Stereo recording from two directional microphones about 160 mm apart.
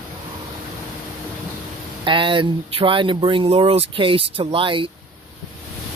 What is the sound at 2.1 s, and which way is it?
Speech, 30° right (ahead or behind).